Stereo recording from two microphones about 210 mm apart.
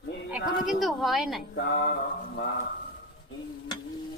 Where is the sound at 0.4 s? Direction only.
40° left (ahead or behind).